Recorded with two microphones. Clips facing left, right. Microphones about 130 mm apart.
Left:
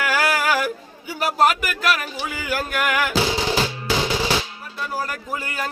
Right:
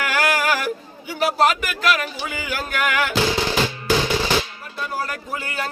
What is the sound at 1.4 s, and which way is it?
Speech, 5° left (ahead or behind).